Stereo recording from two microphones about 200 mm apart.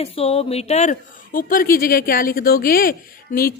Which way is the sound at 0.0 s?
30° left (ahead or behind).